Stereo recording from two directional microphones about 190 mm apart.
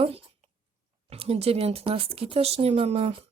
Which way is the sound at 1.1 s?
30° right (ahead or behind).